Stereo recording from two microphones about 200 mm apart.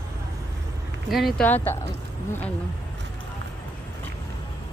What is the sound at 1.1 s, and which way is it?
Speech, centre (ahead or behind).